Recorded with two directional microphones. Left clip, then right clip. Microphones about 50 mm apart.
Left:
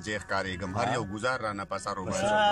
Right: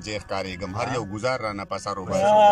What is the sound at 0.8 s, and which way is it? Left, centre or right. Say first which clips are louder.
Speech: right 4 dB; right.